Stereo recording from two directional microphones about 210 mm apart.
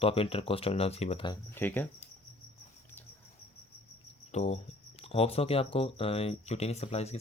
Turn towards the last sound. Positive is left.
turn(degrees=30)  # may be behind; listen again after turning